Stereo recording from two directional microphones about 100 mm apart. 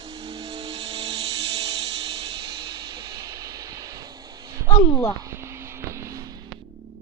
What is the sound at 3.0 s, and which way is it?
Music, 35° right (ahead or behind).